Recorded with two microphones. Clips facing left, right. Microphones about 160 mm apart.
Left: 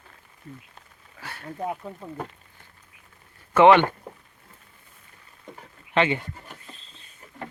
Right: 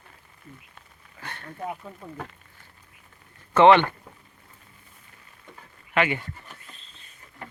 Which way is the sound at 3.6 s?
15° left (ahead or behind).